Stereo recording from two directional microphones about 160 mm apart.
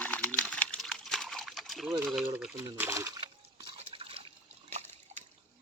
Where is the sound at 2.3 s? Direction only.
10° right (ahead or behind).